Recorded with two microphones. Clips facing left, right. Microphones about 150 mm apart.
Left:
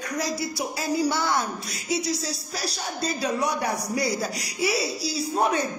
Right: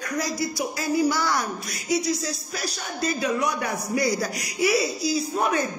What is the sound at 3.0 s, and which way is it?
Speech, 35° left (ahead or behind).